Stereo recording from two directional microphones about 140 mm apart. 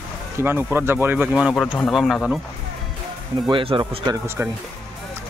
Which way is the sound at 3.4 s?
35° right (ahead or behind).